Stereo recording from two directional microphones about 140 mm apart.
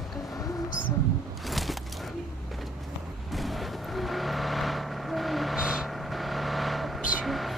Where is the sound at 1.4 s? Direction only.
Centre (ahead or behind).